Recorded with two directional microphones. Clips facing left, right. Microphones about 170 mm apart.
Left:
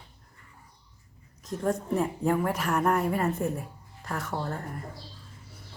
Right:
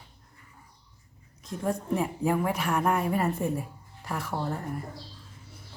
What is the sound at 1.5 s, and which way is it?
A woman's voice, centre (ahead or behind).